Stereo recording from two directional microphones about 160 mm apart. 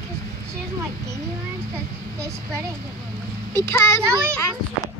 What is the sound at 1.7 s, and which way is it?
Speech, 20° right (ahead or behind).